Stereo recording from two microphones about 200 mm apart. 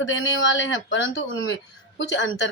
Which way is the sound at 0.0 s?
70° left (ahead or behind).